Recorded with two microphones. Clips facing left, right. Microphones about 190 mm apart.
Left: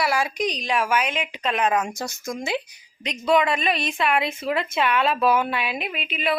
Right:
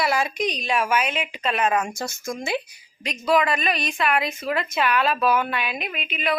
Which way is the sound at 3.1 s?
Centre (ahead or behind).